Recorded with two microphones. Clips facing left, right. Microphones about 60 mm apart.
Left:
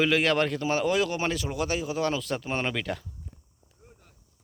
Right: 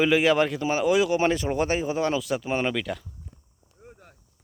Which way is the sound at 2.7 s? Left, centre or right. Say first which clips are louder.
Right 2 dB; centre.